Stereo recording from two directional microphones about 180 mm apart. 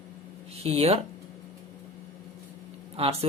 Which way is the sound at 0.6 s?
35° right (ahead or behind).